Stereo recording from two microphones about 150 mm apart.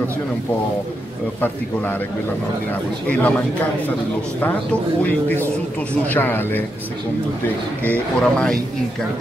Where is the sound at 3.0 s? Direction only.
10° left (ahead or behind).